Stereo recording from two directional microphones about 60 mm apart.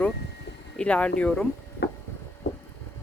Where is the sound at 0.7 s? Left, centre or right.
Left.